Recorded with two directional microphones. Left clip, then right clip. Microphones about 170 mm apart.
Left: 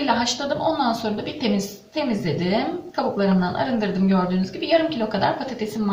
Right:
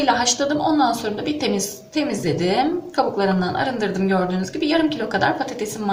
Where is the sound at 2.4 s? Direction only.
50° right (ahead or behind).